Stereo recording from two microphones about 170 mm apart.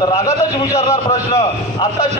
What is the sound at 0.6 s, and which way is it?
Speech, 20° left (ahead or behind).